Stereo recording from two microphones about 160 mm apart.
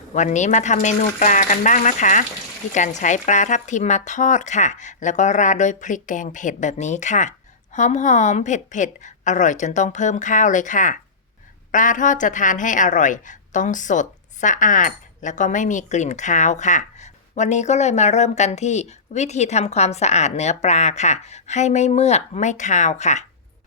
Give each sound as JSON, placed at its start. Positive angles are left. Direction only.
{"t": 0.1, "sound": "a woman's voice", "side_deg": 50}